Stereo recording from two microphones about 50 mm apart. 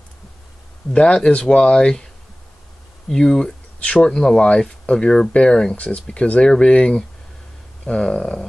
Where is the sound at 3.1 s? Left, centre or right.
Centre.